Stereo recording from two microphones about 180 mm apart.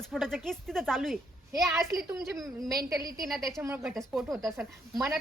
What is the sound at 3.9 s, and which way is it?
Speech, centre (ahead or behind).